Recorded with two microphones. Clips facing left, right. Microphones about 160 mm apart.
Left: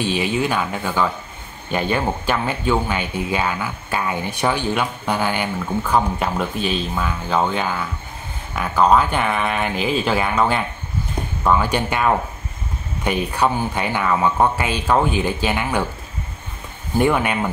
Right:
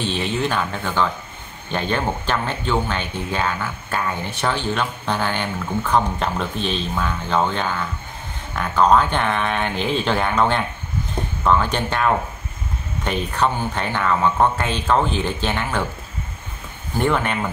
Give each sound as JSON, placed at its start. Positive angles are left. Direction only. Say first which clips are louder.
{"t": 0.0, "sound": "speech", "louder": "left 2 dB", "side_deg": 10}
{"t": 17.0, "sound": "speech", "louder": "left 2 dB", "side_deg": 10}